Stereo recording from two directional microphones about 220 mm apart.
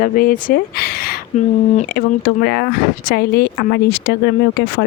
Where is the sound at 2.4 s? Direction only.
50° left (ahead or behind).